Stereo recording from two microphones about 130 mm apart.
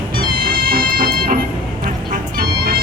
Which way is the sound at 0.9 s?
90° right.